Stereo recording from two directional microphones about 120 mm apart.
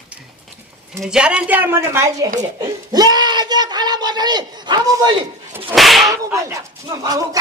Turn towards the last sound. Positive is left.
turn(degrees=-30)  # may be behind; listen again after turning